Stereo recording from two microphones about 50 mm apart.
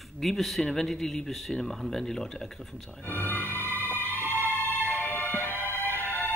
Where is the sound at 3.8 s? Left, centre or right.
Left.